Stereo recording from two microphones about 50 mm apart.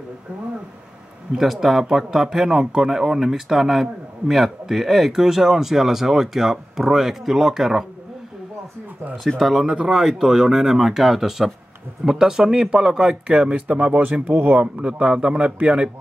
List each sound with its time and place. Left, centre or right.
1.3 s speech: centre
9.4 s speech: centre
13.3 s a man's voice: right
14.2 s speech: right
14.6 s a man's voice: right